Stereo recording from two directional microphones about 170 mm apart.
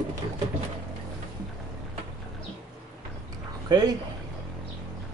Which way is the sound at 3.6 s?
25° right (ahead or behind).